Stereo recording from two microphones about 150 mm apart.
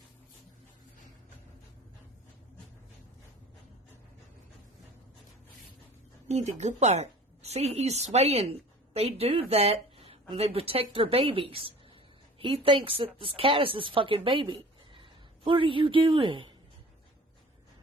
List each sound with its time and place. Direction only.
6.2 s a woman's voice: 50° right (ahead or behind)